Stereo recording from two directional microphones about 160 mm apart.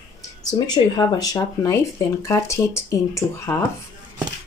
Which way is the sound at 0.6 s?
25° left (ahead or behind).